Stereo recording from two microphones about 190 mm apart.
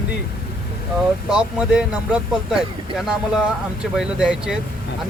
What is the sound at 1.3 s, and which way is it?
Speech, 5° right (ahead or behind).